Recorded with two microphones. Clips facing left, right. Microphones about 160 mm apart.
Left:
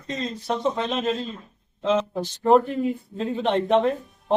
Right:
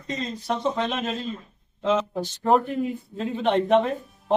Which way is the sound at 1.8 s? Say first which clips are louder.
Left 1 dB; centre (ahead or behind).